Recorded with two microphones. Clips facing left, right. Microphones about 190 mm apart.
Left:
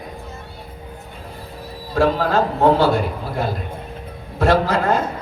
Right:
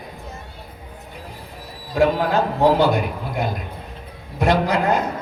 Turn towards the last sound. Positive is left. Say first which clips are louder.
# left 1 dB
turn(degrees=-15)  # may be behind; listen again after turning